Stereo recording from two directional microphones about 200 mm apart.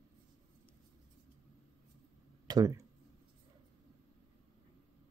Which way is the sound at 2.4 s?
20° right (ahead or behind).